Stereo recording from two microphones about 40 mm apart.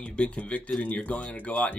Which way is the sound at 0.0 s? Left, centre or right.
Left.